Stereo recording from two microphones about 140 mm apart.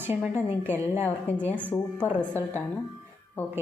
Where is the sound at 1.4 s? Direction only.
10° left (ahead or behind).